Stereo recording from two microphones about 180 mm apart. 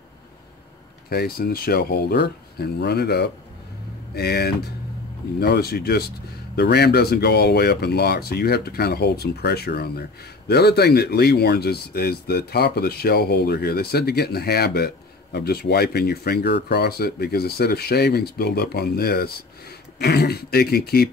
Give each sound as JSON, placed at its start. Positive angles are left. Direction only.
{"t": 1.1, "sound": "speech", "side_deg": 60}